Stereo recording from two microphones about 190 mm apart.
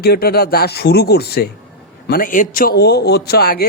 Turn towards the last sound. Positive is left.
turn(degrees=55)  # may be behind; listen again after turning